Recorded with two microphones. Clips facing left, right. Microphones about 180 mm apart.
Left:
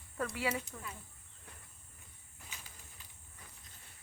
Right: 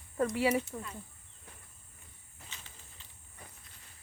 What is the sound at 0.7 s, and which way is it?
Speech, 30° right (ahead or behind).